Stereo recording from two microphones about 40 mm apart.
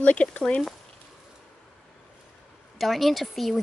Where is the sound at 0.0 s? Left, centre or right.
Left.